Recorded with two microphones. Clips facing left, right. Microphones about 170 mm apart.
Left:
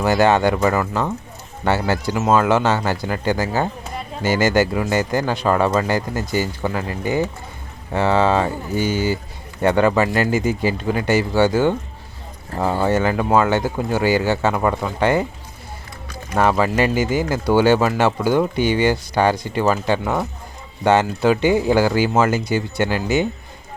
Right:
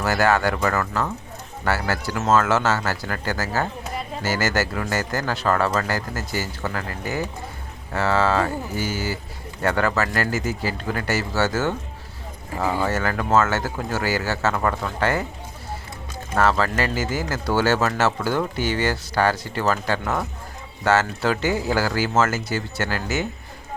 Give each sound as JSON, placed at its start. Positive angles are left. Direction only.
{"t": 0.0, "sound": "speech", "side_deg": 20}
{"t": 12.8, "sound": "speech", "side_deg": 20}
{"t": 16.3, "sound": "speech", "side_deg": 15}